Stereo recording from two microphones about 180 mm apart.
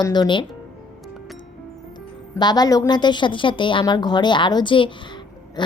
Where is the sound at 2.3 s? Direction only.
20° left (ahead or behind).